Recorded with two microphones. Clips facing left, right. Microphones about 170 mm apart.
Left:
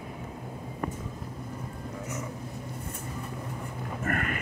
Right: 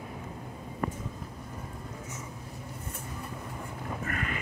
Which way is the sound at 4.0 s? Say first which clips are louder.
Left 6 dB; 50° left (ahead or behind).